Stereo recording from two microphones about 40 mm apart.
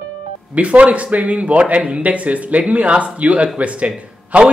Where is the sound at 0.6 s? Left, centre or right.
Right.